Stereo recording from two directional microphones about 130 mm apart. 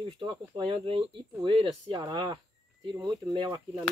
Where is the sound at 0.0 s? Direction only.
40° right (ahead or behind).